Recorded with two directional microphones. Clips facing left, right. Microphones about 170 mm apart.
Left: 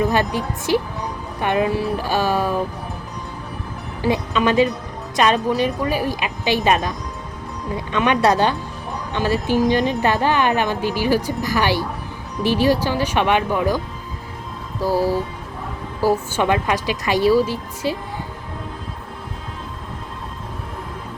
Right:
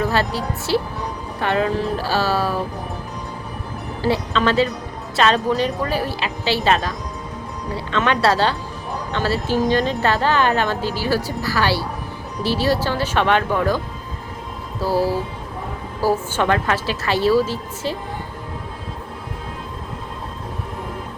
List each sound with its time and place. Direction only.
0.0 s a woman's voice: 15° left (ahead or behind)
4.0 s a woman's voice: 15° left (ahead or behind)
7.9 s a woman's voice: 15° left (ahead or behind)
14.9 s speech: 10° right (ahead or behind)
16.1 s a woman's voice: 10° left (ahead or behind)